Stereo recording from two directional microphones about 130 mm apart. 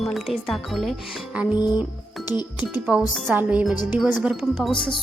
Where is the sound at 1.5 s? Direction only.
35° left (ahead or behind).